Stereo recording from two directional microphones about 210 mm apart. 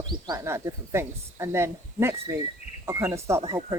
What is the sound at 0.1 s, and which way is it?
Speech, 15° right (ahead or behind).